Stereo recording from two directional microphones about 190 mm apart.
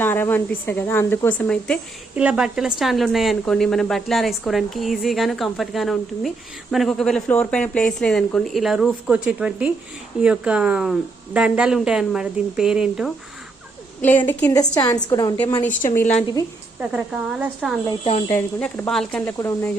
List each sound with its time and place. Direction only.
0.0 s speech: 10° left (ahead or behind)
2.1 s a woman's voice: 5° right (ahead or behind)
14.0 s a woman's voice: 10° left (ahead or behind)
16.0 s a woman's voice: 5° left (ahead or behind)
16.8 s a woman's voice: 5° right (ahead or behind)
18.3 s speech: 15° left (ahead or behind)